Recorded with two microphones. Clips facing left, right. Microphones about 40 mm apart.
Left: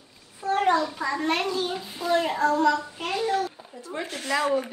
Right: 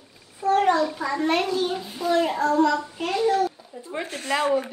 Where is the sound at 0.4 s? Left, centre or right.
Centre.